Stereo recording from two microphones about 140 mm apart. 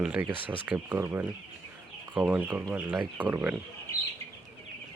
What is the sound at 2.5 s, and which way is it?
Speech, 25° right (ahead or behind).